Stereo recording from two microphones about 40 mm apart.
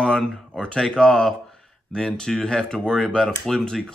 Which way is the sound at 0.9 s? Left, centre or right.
Left.